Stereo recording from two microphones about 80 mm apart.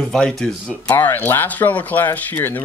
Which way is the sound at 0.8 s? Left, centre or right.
Left.